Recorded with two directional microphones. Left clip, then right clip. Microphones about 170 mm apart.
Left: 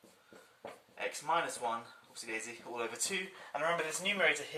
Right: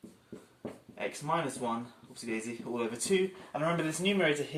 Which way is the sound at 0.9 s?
Centre (ahead or behind).